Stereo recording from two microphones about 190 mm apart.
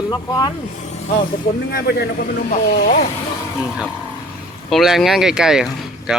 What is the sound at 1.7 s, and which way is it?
Speech, 55° left (ahead or behind).